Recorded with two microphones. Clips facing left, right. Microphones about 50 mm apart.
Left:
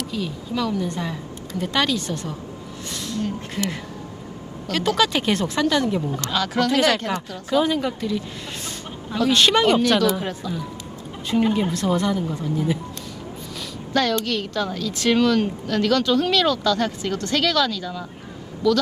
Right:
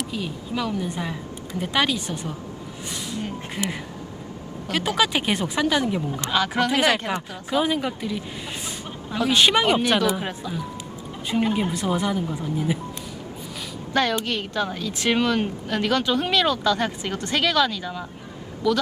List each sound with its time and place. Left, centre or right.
0.0 s a woman's voice: centre
13.9 s a woman's voice: right